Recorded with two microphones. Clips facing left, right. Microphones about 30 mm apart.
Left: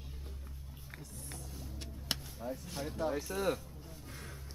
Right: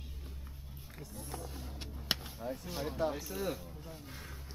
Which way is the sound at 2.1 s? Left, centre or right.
Right.